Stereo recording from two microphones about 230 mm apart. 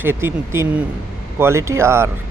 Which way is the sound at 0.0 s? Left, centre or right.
Centre.